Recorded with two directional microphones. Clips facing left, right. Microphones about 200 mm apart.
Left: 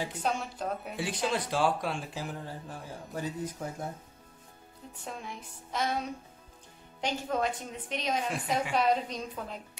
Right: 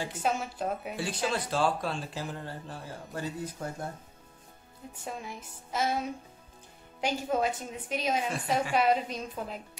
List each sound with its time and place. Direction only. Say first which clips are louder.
0.2 s a woman's voice: right 4 dB; 5° right (ahead or behind)
0.9 s a woman's voice: left 3 dB; 15° left (ahead or behind)
5.0 s a woman's voice: right 2 dB; 5° right (ahead or behind)